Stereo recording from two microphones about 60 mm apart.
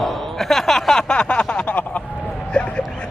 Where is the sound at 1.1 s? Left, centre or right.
Centre.